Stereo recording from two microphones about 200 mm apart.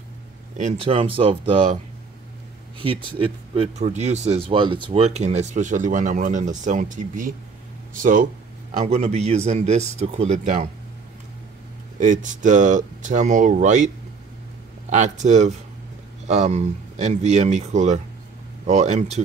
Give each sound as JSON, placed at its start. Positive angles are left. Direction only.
{"t": 0.6, "sound": "speech", "side_deg": -35}
{"t": 2.8, "sound": "speech", "side_deg": -25}
{"t": 12.0, "sound": "speech", "side_deg": -40}
{"t": 14.9, "sound": "speech", "side_deg": -35}